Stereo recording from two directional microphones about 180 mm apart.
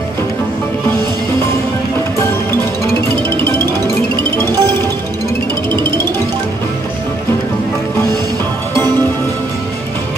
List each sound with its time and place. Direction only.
3.8 s music: 25° right (ahead or behind)